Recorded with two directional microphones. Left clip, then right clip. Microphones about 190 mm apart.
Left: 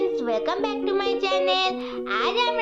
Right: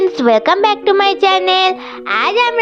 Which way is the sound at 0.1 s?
50° right (ahead or behind).